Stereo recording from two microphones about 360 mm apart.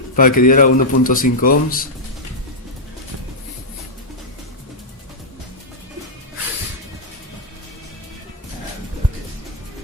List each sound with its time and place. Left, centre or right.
0.2 s speech: left